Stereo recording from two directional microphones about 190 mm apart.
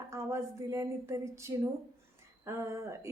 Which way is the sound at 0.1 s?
15° right (ahead or behind).